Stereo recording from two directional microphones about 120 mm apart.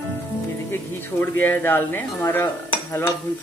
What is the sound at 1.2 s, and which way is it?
Dishes, 15° left (ahead or behind).